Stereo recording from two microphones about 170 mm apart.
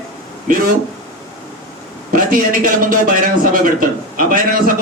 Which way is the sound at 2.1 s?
55° right (ahead or behind).